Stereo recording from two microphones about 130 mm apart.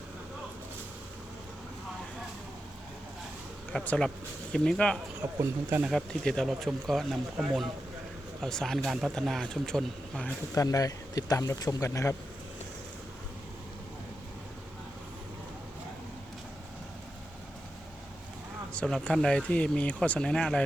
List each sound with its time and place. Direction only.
3.7 s speech: 10° left (ahead or behind)
5.4 s speech: 15° right (ahead or behind)
5.9 s speech: 5° left (ahead or behind)
10.5 s speech: 25° left (ahead or behind)
18.7 s speech: 5° left (ahead or behind)